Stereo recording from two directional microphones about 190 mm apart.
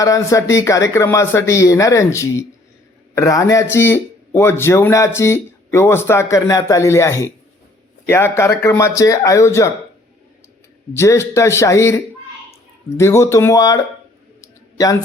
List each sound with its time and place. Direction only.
0.0 s speech: 15° left (ahead or behind)
10.9 s speech: 15° left (ahead or behind)
14.4 s a sound: 20° left (ahead or behind)